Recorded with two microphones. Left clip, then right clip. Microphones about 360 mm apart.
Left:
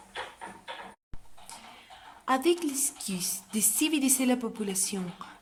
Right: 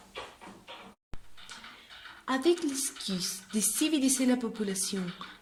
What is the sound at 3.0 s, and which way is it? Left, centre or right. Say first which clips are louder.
Speech: right 1 dB; centre.